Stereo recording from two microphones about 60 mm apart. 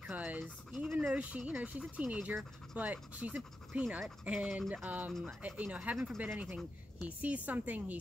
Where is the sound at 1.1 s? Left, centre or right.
Right.